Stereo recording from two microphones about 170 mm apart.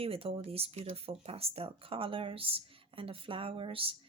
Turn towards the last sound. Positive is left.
turn(degrees=-35)  # may be behind; listen again after turning